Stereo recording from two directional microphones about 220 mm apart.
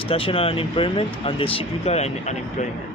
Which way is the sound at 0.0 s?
25° left (ahead or behind).